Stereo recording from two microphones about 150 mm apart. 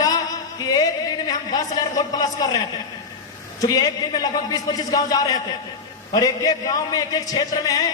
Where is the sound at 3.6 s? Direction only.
25° left (ahead or behind).